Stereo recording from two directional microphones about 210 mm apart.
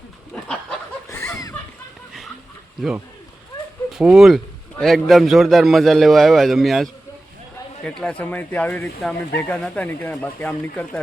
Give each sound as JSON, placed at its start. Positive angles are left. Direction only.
{"t": 0.3, "sound": "a sound", "side_deg": 5}
{"t": 1.0, "sound": "chuckle", "side_deg": 10}
{"t": 3.9, "sound": "a man's voice", "side_deg": -5}
{"t": 8.0, "sound": "speech", "side_deg": 10}